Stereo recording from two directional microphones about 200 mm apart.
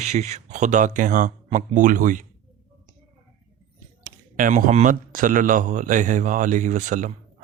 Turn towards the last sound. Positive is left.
turn(degrees=-40)  # may be behind; listen again after turning